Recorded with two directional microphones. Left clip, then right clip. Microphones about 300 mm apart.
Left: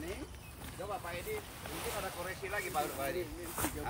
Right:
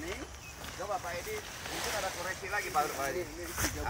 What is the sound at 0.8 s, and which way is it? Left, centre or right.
Speech, centre.